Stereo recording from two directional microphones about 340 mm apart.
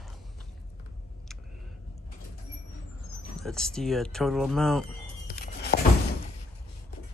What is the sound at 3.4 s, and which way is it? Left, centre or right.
A man's voice, centre.